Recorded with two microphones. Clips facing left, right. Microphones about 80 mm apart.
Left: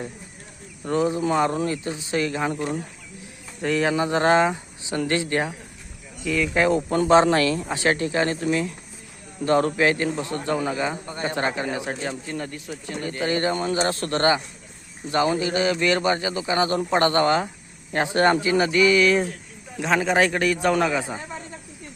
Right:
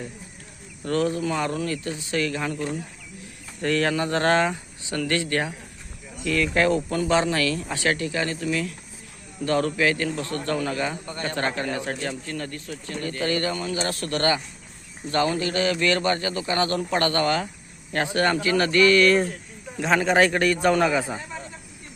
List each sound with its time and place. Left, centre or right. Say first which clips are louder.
0.9 s speech: left 1 dB; centre
1.2 s speech: left 4 dB; left
3.6 s speech: left 1 dB; centre
6.9 s a man's voice: left 5 dB; left; by 21.2 s centre